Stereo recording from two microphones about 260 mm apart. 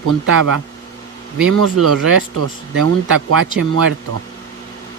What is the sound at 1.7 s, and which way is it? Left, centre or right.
Speech, right.